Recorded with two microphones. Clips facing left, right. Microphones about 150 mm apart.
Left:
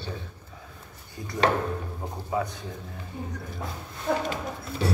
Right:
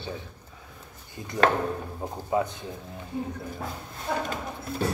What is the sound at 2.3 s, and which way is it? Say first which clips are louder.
Speech: right 3 dB; 20° right (ahead or behind).